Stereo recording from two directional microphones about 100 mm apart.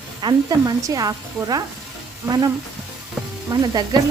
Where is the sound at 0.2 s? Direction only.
50° right (ahead or behind).